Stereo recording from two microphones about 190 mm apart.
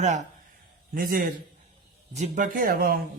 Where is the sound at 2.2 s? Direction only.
40° right (ahead or behind).